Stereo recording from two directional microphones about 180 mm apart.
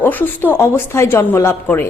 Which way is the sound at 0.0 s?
10° left (ahead or behind).